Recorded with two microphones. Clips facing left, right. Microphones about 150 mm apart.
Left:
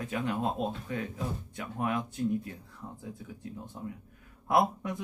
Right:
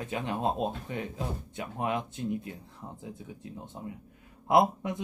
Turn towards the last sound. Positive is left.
turn(degrees=-20)  # may be behind; listen again after turning